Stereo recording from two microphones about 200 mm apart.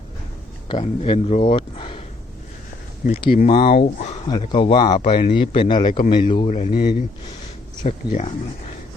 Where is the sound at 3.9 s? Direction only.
35° left (ahead or behind).